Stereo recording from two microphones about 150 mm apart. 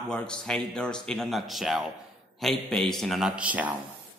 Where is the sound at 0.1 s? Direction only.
5° left (ahead or behind).